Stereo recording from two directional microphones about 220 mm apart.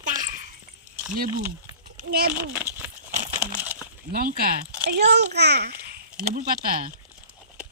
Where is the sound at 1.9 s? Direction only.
45° right (ahead or behind).